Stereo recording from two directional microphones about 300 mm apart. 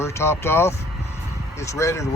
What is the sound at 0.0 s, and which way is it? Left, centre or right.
Speech, centre.